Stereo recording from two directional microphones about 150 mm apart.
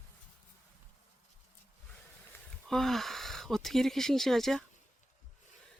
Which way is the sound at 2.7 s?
5° left (ahead or behind).